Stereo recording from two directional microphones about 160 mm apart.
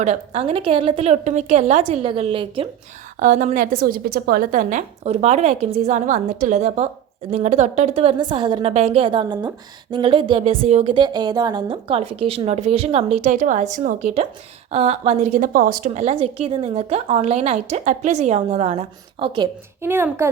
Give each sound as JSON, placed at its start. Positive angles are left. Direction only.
{"t": 0.0, "sound": "a woman's voice", "side_deg": -45}
{"t": 3.2, "sound": "a woman's voice", "side_deg": -50}
{"t": 8.2, "sound": "a woman's voice", "side_deg": -30}
{"t": 10.9, "sound": "a woman's voice", "side_deg": -25}
{"t": 19.8, "sound": "a child's voice", "side_deg": -15}